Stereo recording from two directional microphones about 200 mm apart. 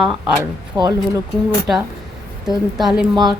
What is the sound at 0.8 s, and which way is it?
Speech, 20° right (ahead or behind).